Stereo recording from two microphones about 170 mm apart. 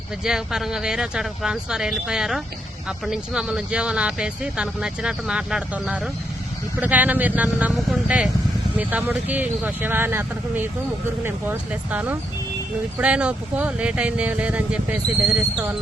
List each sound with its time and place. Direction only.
0.3 s speech: 5° right (ahead or behind)